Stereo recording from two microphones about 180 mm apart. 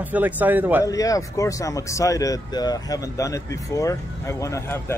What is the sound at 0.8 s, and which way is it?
A man's voice, 20° left (ahead or behind).